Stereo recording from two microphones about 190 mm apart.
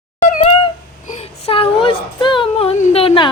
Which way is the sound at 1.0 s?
35° left (ahead or behind).